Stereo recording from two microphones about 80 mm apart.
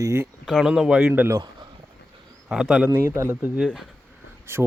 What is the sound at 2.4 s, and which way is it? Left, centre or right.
Speech, centre.